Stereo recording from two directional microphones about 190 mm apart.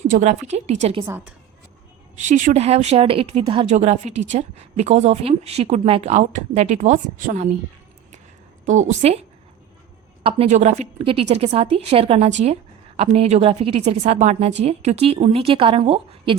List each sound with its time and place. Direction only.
0.1 s a woman's voice: 35° right (ahead or behind)
1.0 s a woman's voice: 10° right (ahead or behind)
2.2 s a woman's voice: 40° right (ahead or behind)
8.6 s a woman's voice: 40° right (ahead or behind)
10.2 s a woman's voice: 30° right (ahead or behind)